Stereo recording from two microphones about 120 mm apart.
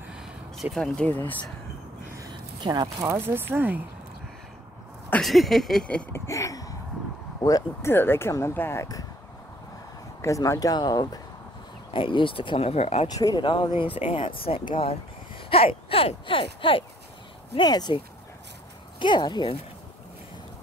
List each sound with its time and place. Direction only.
0.1 s a sound: 5° right (ahead or behind)
1.0 s speech: 15° left (ahead or behind)
2.3 s speech: 40° right (ahead or behind); by 3.8 s 15° right (ahead or behind)
5.2 s a sound: centre (ahead or behind)
6.1 s speech: 25° left (ahead or behind)
7.9 s speech: 20° left (ahead or behind)
10.2 s speech: 25° left (ahead or behind); by 13.1 s 60° left (ahead or behind)
13.1 s speech: 35° left (ahead or behind)
17.6 s speech: 35° left (ahead or behind)